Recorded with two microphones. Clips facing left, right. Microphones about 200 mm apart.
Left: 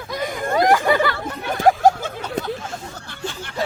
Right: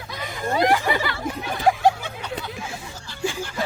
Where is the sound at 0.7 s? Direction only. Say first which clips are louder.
Left 5 dB; 50° left (ahead or behind).